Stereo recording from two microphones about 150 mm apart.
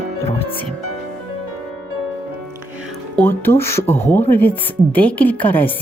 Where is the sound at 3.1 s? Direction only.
15° left (ahead or behind).